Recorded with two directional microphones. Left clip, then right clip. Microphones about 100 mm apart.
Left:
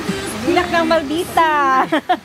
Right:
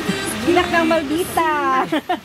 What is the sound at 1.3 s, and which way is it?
Speech, 55° left (ahead or behind).